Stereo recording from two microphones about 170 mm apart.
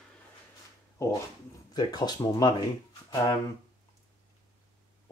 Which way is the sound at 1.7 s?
25° left (ahead or behind).